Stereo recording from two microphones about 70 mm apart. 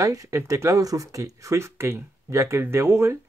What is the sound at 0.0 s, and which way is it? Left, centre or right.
Speech, right.